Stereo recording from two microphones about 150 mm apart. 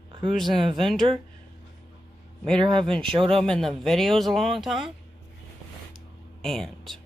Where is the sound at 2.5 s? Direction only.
35° right (ahead or behind).